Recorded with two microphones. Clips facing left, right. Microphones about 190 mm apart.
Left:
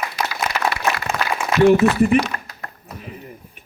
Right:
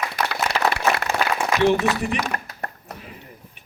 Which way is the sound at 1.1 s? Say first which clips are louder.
Right 1 dB; 35° right (ahead or behind).